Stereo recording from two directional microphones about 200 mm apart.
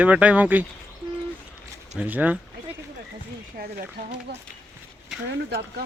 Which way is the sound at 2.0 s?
10° right (ahead or behind).